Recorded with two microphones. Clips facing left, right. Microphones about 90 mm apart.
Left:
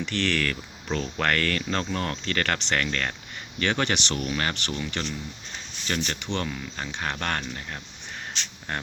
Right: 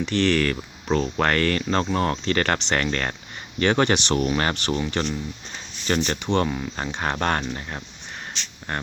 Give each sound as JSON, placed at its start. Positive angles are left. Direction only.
{"t": 0.0, "sound": "speech", "side_deg": -15}